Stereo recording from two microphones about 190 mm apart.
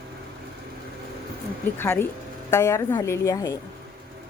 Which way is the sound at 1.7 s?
10° left (ahead or behind).